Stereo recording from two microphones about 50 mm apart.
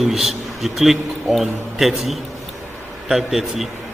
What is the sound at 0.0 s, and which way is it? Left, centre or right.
A man's voice, centre.